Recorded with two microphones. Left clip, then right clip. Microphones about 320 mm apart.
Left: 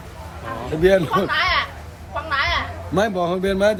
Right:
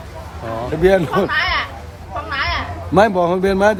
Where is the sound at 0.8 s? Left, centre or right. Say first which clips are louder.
Right 2 dB; centre.